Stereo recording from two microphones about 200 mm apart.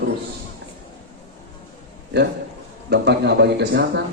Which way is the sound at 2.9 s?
60° right (ahead or behind).